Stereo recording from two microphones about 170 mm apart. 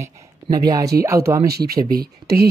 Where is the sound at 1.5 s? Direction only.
65° right (ahead or behind).